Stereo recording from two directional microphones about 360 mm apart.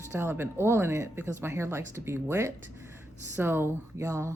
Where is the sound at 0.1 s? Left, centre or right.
Centre.